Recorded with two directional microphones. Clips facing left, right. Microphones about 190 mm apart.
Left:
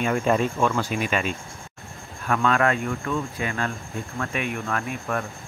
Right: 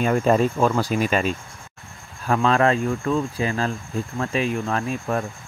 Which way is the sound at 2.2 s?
30° right (ahead or behind).